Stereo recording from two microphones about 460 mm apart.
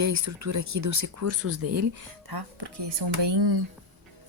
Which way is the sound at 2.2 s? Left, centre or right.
Right.